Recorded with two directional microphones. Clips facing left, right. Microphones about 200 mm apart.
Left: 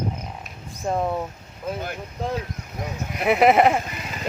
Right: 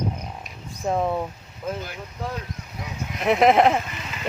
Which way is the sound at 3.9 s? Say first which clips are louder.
Left 2 dB; 40° left (ahead or behind).